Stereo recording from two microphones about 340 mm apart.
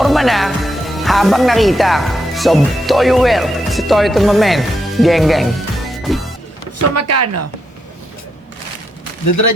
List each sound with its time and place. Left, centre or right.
0.0 s speech: centre
6.9 s speech: right
9.2 s speech: left